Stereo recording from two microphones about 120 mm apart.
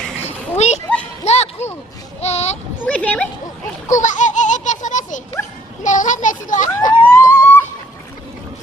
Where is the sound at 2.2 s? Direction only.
65° left (ahead or behind).